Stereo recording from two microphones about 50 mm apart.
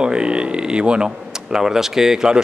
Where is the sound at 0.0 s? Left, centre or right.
Centre.